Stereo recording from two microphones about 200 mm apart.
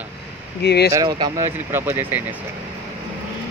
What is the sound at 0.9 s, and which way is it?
Speech, 20° right (ahead or behind).